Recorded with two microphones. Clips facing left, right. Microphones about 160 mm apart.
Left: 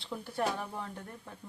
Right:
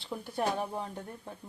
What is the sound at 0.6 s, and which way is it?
Speech, 25° right (ahead or behind).